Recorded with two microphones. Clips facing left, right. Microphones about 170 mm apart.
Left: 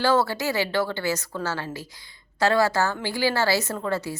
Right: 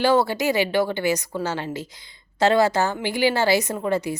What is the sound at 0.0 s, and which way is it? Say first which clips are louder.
A woman's voice: right 3 dB; 15° right (ahead or behind).